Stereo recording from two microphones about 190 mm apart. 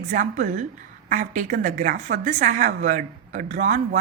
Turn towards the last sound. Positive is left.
turn(degrees=-40)  # may be behind; listen again after turning